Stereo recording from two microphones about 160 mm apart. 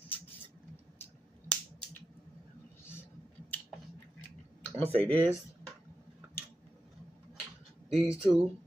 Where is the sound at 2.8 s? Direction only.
15° left (ahead or behind).